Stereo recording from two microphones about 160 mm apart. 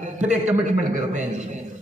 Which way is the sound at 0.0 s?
50° right (ahead or behind).